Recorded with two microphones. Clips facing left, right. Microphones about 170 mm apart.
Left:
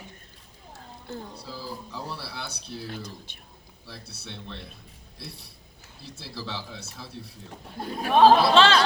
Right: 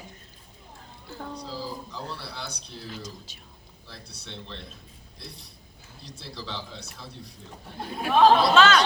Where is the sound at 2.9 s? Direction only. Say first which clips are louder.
Left 1 dB; 55° left (ahead or behind).